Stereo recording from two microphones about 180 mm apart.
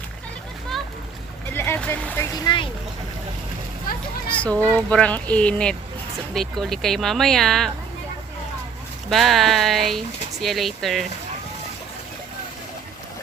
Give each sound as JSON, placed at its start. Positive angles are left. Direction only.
{"t": 1.5, "sound": "a child's voice", "side_deg": 10}
{"t": 3.9, "sound": "speech", "side_deg": 50}
{"t": 4.3, "sound": "a child's voice", "side_deg": 5}
{"t": 9.0, "sound": "speech", "side_deg": 0}